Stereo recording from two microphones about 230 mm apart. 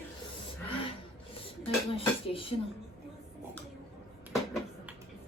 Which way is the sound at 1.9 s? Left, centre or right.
Left.